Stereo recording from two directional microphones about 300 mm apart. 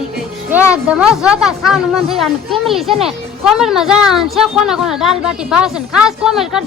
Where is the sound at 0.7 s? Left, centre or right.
Centre.